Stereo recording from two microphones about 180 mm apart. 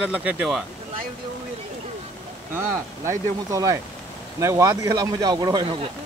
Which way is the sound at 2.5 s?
15° right (ahead or behind).